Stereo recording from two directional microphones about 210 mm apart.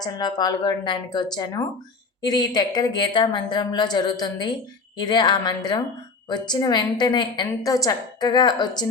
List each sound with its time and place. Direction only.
0.0 s a woman's voice: 20° left (ahead or behind)